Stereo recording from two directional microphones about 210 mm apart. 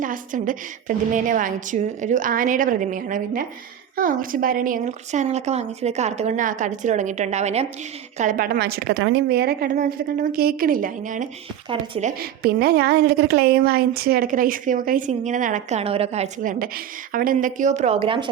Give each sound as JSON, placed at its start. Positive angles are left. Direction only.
{"t": 0.0, "sound": "a woman's voice", "side_deg": -40}
{"t": 12.2, "sound": "a woman's voice", "side_deg": -50}